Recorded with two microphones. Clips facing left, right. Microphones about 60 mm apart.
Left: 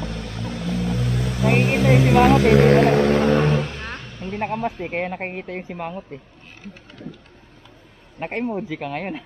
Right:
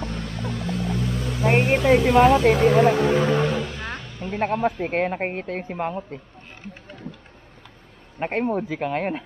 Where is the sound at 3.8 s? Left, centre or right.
Centre.